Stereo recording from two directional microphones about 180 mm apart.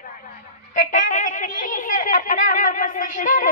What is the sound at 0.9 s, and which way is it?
Speech, 45° left (ahead or behind).